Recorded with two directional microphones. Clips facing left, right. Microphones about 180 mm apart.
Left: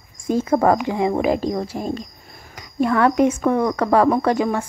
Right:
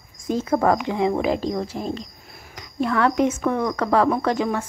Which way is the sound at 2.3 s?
5° right (ahead or behind).